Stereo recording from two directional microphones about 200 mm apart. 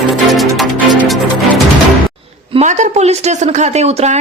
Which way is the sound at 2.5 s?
35° right (ahead or behind).